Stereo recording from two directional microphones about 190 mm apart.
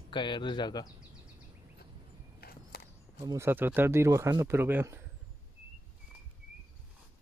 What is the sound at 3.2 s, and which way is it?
Speech, 15° right (ahead or behind).